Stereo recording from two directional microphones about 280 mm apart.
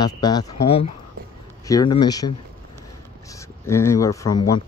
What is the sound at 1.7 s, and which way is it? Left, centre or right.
Speech, centre.